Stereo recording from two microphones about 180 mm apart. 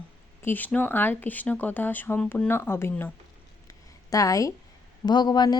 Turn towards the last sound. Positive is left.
turn(degrees=25)  # may be behind; listen again after turning